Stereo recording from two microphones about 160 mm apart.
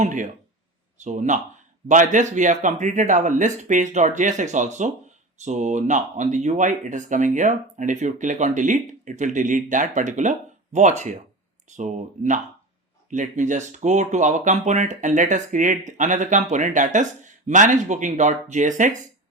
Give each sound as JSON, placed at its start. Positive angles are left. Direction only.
{"t": 0.0, "sound": "speech", "side_deg": -50}